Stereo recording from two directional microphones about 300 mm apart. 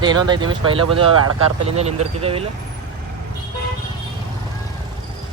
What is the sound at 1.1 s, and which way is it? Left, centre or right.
Speech, right.